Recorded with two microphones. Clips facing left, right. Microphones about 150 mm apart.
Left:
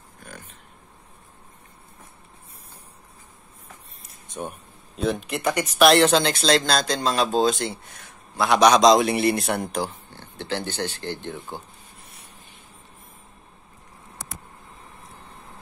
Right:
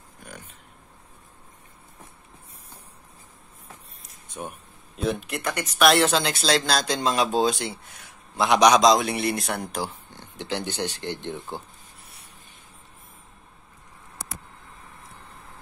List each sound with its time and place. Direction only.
0.2 s a sound: 15° right (ahead or behind)
4.4 s speech: centre (ahead or behind)
8.8 s speech: centre (ahead or behind)
10.1 s speech: 15° right (ahead or behind)